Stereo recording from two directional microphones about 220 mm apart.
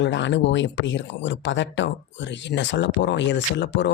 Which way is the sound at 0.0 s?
55° left (ahead or behind).